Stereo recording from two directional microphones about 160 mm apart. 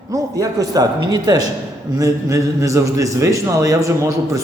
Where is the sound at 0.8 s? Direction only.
25° right (ahead or behind).